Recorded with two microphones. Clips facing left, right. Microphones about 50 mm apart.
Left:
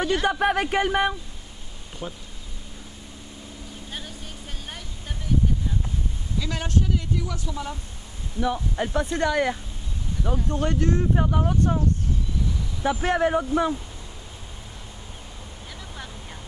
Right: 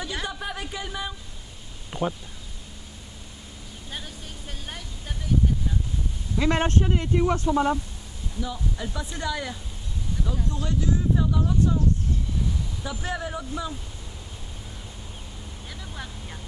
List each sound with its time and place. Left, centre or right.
0.2 s speech: left
2.0 s speech: right
6.3 s speech: right
8.5 s speech: left
12.8 s speech: left